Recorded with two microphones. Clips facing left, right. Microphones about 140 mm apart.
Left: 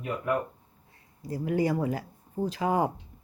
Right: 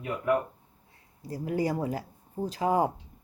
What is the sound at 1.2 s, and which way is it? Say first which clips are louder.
A woman's voice: left 2 dB; 35° right (ahead or behind).